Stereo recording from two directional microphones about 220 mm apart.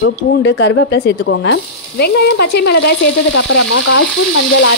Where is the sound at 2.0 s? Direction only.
45° left (ahead or behind).